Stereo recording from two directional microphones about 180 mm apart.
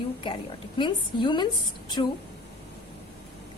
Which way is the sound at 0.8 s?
25° left (ahead or behind).